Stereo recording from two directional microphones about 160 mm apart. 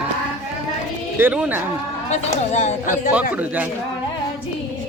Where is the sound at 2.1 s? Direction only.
45° left (ahead or behind).